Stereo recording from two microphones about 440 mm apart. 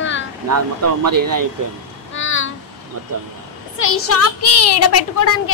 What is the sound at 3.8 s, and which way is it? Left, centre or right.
Speech, left.